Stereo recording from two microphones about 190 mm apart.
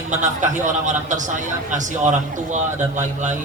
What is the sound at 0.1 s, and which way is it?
A man's voice, 40° right (ahead or behind).